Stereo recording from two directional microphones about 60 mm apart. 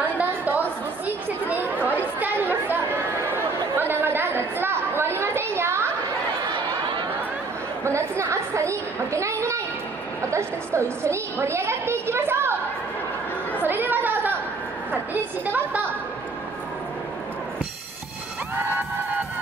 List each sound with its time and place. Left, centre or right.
0.0 s chatter: right
7.8 s chatter: right
10.3 s a sound: right
13.6 s chatter: right
15.4 s a woman's voice: right